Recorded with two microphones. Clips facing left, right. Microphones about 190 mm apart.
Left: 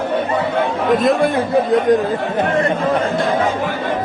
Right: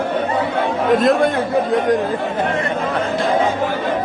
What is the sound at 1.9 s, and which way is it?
Speech, 25° left (ahead or behind).